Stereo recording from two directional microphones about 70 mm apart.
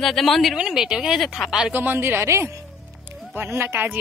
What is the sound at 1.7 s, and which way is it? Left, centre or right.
A woman's voice, right.